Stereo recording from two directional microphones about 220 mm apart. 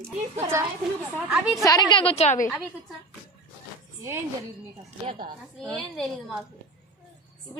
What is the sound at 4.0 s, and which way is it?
Speech, 10° right (ahead or behind).